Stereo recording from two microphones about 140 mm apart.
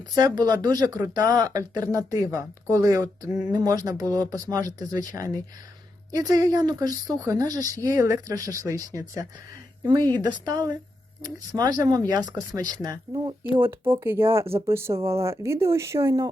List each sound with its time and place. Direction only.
0.2 s speech: 30° right (ahead or behind)
13.6 s speech: 15° right (ahead or behind)